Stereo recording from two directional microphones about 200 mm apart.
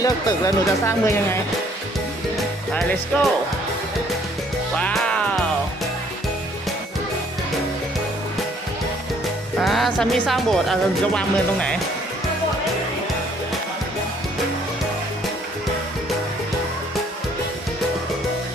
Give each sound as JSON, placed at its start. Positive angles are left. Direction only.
{"t": 0.0, "sound": "speech", "side_deg": 15}
{"t": 3.1, "sound": "speech", "side_deg": 5}
{"t": 4.8, "sound": "music", "side_deg": 5}
{"t": 9.6, "sound": "speech", "side_deg": 0}